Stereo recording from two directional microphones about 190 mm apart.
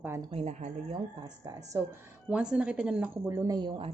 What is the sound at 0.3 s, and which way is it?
Speech, 35° right (ahead or behind).